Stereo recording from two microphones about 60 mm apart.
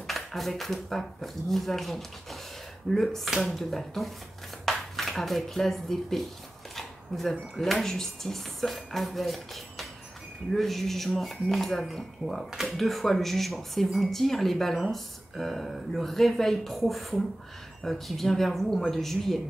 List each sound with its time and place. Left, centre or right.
0.0 s speech: centre